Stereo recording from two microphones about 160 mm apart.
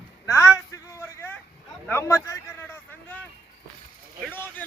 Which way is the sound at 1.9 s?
15° left (ahead or behind).